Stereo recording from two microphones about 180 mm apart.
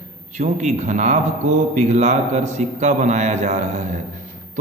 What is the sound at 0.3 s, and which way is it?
A man's voice, 40° right (ahead or behind).